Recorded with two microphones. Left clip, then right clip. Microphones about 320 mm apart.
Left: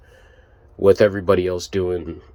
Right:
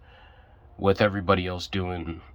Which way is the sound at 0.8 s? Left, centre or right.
Centre.